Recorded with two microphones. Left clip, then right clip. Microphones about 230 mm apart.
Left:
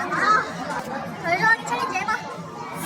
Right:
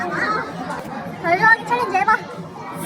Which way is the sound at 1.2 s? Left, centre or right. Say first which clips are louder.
Right 5 dB; centre.